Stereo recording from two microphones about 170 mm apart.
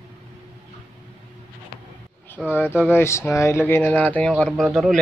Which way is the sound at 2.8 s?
15° left (ahead or behind).